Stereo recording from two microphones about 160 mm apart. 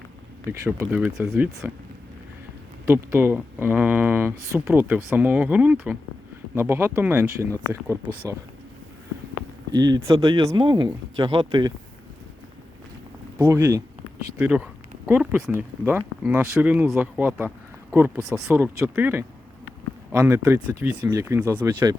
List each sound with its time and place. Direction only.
0.6 s speech: 15° right (ahead or behind)
2.8 s speech: 15° right (ahead or behind)
9.7 s speech: 25° right (ahead or behind)
13.4 s speech: 20° right (ahead or behind)